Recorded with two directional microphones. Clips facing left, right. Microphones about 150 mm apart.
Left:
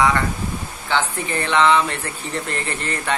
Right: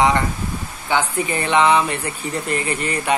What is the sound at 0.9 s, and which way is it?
Speech, 15° right (ahead or behind).